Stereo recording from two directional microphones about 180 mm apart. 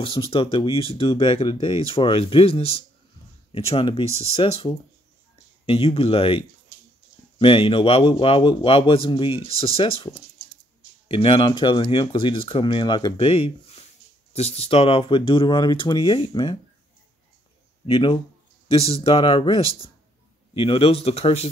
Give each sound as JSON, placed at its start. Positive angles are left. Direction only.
{"t": 0.0, "sound": "speech", "side_deg": 30}
{"t": 17.8, "sound": "speech", "side_deg": 25}